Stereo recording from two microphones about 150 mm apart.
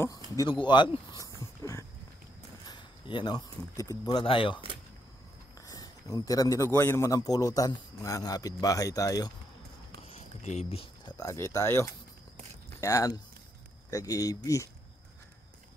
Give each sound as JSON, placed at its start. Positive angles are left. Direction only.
{"t": 0.4, "sound": "speech", "side_deg": 30}
{"t": 1.6, "sound": "a sound", "side_deg": 20}
{"t": 2.6, "sound": "speech", "side_deg": 30}
{"t": 5.7, "sound": "a man's voice", "side_deg": 25}
{"t": 10.0, "sound": "a sound", "side_deg": 45}
{"t": 11.1, "sound": "a man's voice", "side_deg": 20}